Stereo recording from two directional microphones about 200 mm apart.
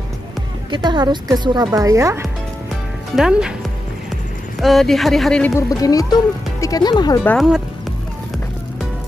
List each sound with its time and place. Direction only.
0.7 s speech: 20° right (ahead or behind)
3.2 s speech: 5° right (ahead or behind)
4.6 s speech: centre (ahead or behind); by 7.2 s 20° left (ahead or behind)
7.2 s speech: centre (ahead or behind)